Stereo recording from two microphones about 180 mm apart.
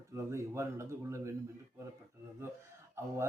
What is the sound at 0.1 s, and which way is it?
Speech, 15° right (ahead or behind).